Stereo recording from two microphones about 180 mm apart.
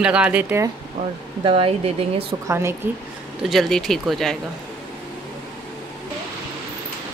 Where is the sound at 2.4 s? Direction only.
15° right (ahead or behind).